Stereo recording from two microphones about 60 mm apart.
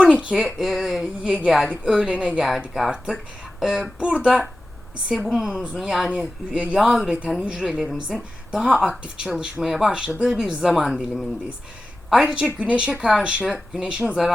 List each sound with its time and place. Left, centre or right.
0.0 s speech: centre
5.1 s speech: centre
6.7 s speech: centre
8.1 s a woman's voice: centre
8.6 s speech: centre
12.2 s speech: centre